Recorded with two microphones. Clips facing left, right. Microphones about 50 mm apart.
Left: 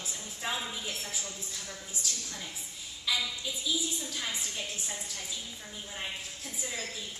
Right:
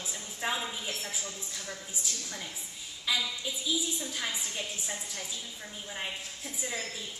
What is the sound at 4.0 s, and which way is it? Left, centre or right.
Speech, centre.